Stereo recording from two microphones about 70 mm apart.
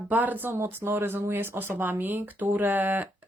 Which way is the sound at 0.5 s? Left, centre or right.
Right.